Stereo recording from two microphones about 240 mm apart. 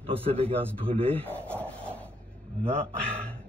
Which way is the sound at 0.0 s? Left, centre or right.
Right.